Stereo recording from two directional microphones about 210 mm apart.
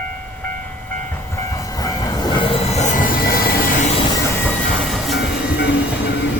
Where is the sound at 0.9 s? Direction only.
10° left (ahead or behind); by 3.8 s 45° left (ahead or behind).